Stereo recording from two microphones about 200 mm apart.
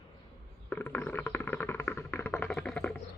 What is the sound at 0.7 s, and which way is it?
Music, 10° left (ahead or behind).